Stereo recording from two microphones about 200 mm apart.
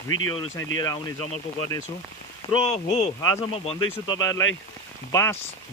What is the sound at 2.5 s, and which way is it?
Speech, 30° left (ahead or behind).